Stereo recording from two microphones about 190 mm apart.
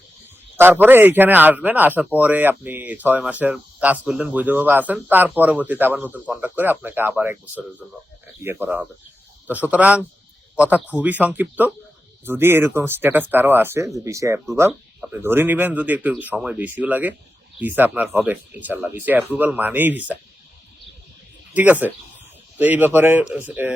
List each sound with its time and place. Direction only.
0.5 s speech: 10° right (ahead or behind)
21.5 s speech: 10° right (ahead or behind)